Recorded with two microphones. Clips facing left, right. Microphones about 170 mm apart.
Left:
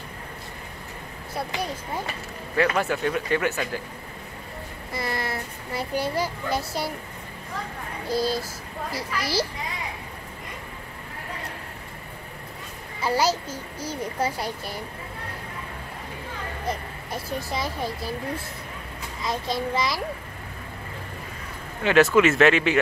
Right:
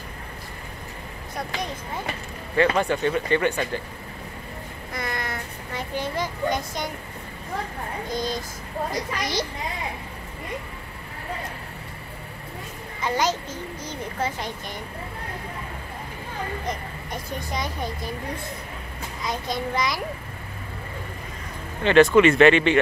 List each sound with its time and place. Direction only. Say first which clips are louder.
1.3 s speech: left 1 dB; 5° left (ahead or behind)
5.1 s a sound: left 4 dB; 30° left (ahead or behind)
5.7 s speech: left 2 dB; 10° left (ahead or behind)
8.1 s speech: left 5 dB; 5° left (ahead or behind)
13.0 s speech: left 1 dB; 10° left (ahead or behind)
16.6 s speech: left 1 dB; 5° left (ahead or behind)
19.2 s speech: left 1 dB; centre (ahead or behind)
21.8 s speech: right 3 dB; 5° left (ahead or behind)